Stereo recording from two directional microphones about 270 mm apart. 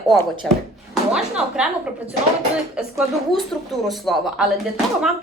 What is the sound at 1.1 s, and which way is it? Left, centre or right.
Speech, centre.